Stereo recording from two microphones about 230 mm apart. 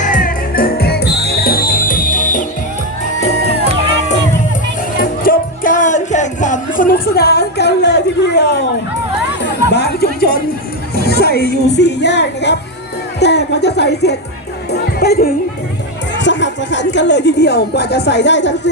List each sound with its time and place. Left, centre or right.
0.0 s music: left
4.9 s music: left
9.6 s music: left
10.9 s speech: left